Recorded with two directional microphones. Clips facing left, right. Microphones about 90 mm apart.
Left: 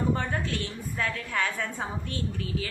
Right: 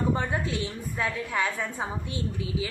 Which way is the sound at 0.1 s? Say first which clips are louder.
Right 1 dB; 15° right (ahead or behind).